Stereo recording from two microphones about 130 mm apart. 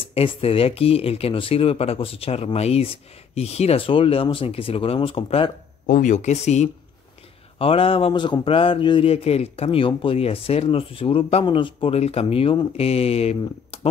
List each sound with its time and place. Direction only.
0.0 s speech: 45° left (ahead or behind)
5.9 s speech: 70° left (ahead or behind)
7.5 s speech: 45° left (ahead or behind)